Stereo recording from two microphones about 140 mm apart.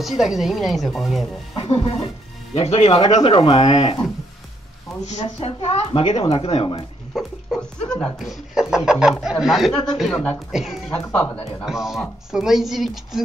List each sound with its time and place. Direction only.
0.0 s speech: centre (ahead or behind)
1.5 s speech: 40° left (ahead or behind)
5.0 s speech: 50° left (ahead or behind)
7.5 s speech: 5° left (ahead or behind)
10.9 s speech: 15° left (ahead or behind)
11.6 s speech: 5° right (ahead or behind)